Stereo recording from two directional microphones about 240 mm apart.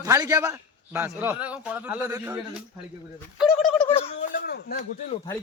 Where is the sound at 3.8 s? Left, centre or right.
Left.